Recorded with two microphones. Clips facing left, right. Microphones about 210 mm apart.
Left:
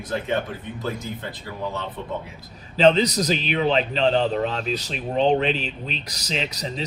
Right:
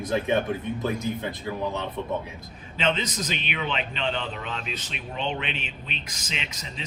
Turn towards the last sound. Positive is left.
turn(degrees=35)  # may be behind; listen again after turning